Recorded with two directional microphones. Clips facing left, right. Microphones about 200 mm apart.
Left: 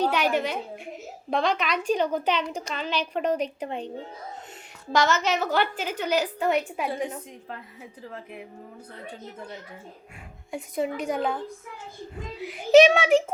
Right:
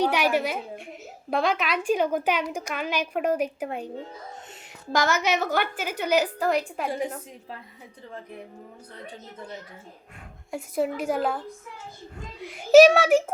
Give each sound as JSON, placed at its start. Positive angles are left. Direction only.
{"t": 0.0, "sound": "a woman's voice", "side_deg": -10}
{"t": 6.4, "sound": "a child's voice", "side_deg": 0}
{"t": 10.5, "sound": "a child's voice", "side_deg": -5}
{"t": 12.4, "sound": "a child's voice", "side_deg": 0}